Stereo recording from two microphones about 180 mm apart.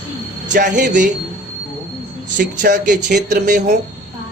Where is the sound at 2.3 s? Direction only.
50° right (ahead or behind).